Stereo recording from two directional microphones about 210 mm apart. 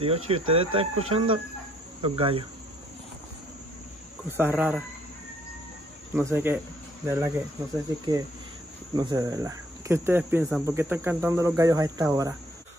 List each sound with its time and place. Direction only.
0.0 s speech: 25° right (ahead or behind)
4.3 s speech: 10° right (ahead or behind)
6.1 s speech: 10° right (ahead or behind)